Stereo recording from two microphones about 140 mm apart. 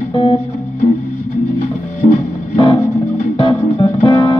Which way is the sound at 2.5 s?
30° left (ahead or behind).